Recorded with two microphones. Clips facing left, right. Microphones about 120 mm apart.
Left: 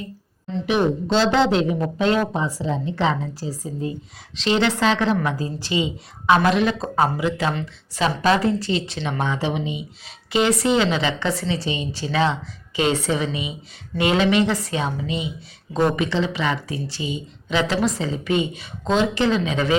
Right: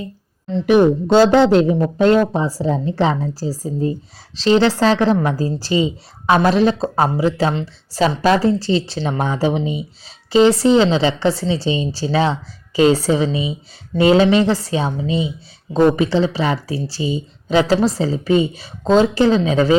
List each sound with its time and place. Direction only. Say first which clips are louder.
0.6 s a woman's voice: right 8 dB; 50° right (ahead or behind)